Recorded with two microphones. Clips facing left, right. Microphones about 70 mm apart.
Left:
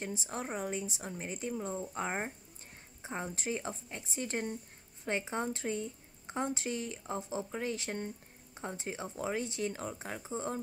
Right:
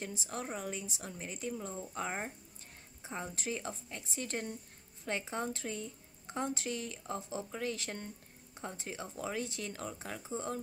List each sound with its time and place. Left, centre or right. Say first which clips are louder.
0.0 s a woman's voice: left 2 dB; left